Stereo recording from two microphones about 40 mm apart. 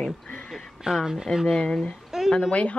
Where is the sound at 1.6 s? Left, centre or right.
Centre.